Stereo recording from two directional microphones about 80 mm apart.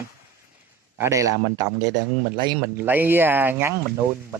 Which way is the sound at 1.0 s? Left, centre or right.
Right.